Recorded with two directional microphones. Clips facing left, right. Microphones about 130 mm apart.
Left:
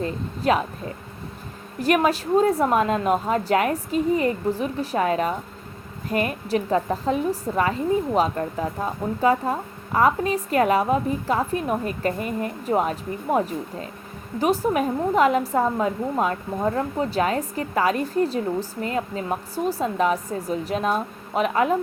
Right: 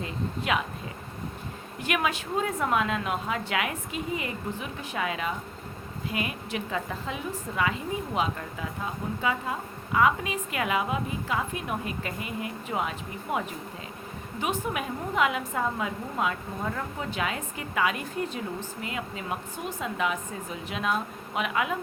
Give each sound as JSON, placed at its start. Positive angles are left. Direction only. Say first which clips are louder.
{"t": 0.0, "sound": "a woman's voice", "louder": "left 7 dB", "side_deg": 40}
{"t": 1.8, "sound": "a woman's voice", "louder": "left 9 dB", "side_deg": 40}